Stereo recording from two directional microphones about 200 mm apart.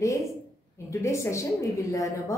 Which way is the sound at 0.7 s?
15° left (ahead or behind).